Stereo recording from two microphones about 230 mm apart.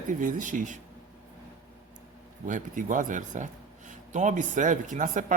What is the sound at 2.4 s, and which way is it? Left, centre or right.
Speech, right.